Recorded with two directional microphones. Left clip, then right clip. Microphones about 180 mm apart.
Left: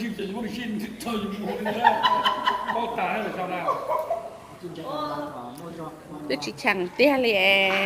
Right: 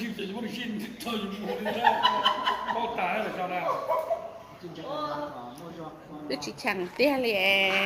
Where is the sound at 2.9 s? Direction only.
20° right (ahead or behind).